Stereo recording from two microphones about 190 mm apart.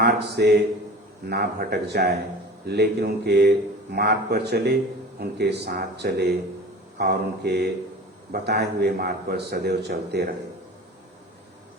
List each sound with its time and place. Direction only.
0.0 s a man's voice: 60° right (ahead or behind)